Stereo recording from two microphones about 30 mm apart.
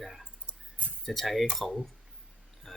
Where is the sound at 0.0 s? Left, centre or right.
Centre.